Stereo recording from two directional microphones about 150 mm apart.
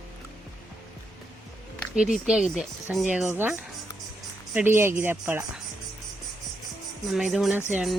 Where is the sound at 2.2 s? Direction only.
5° right (ahead or behind).